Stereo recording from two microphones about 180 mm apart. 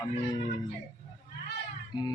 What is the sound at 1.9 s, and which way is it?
Music, 25° left (ahead or behind).